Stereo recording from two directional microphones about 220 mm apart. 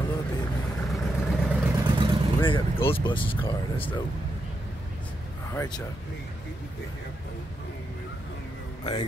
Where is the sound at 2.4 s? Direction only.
25° left (ahead or behind).